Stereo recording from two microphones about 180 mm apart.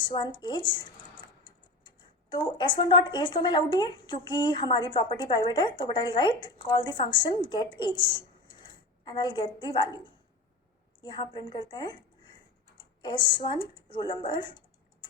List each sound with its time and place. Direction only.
0.0 s speech: 25° left (ahead or behind)